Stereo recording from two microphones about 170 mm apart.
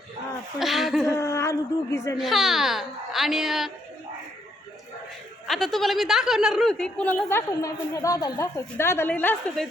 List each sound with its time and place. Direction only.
0.6 s speech: centre (ahead or behind)
1.0 s speech: 15° left (ahead or behind)
2.1 s speech: centre (ahead or behind)
5.5 s speech: centre (ahead or behind)